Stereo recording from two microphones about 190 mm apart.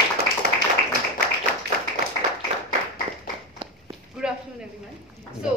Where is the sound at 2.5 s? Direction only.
30° right (ahead or behind).